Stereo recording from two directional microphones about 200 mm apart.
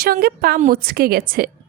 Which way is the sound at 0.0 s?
50° right (ahead or behind).